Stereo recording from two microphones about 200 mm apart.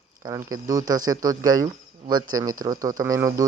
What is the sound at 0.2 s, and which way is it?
Speech, 15° right (ahead or behind).